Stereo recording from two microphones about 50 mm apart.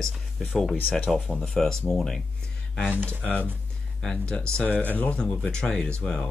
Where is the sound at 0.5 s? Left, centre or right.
Centre.